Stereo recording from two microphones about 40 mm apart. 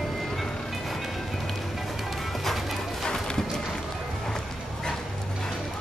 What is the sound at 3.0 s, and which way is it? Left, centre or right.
Clip-clop, centre.